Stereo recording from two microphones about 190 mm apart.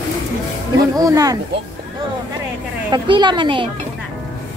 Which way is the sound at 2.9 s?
25° right (ahead or behind).